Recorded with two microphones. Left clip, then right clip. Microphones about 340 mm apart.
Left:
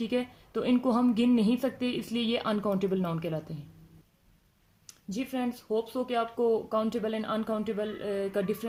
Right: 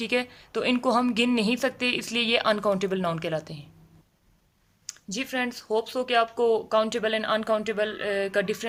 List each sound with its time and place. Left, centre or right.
0.0 s a woman's voice: right
4.9 s a woman's voice: right